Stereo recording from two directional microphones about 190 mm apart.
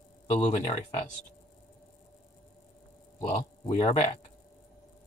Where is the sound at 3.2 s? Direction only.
25° left (ahead or behind).